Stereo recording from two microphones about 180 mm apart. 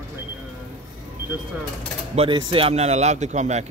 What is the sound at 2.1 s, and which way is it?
Speech, 30° right (ahead or behind).